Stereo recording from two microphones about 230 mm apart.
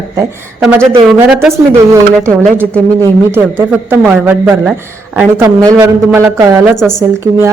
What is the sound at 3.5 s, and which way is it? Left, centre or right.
A woman's voice, centre.